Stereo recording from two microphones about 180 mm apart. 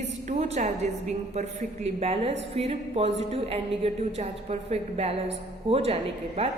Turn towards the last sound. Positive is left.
turn(degrees=-35)  # may be behind; listen again after turning